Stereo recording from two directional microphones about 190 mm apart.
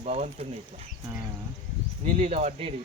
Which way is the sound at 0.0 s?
35° right (ahead or behind).